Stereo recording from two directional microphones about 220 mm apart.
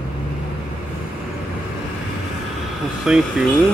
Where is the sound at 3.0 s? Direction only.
5° right (ahead or behind).